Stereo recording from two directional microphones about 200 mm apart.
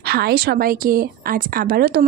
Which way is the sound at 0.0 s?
50° right (ahead or behind).